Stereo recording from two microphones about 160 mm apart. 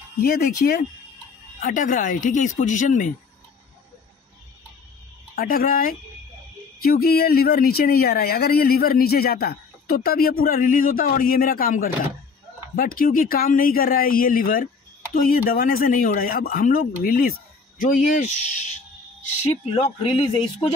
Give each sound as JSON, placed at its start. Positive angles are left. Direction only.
{"t": 0.2, "sound": "speech", "side_deg": 70}
{"t": 1.6, "sound": "speech", "side_deg": 55}
{"t": 5.3, "sound": "a man's voice", "side_deg": 70}